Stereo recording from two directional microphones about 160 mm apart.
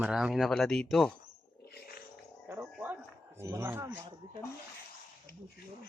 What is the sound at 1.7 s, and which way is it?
Dog, 85° left.